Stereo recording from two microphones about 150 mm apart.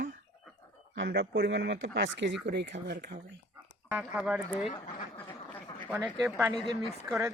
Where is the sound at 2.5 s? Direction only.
90° right.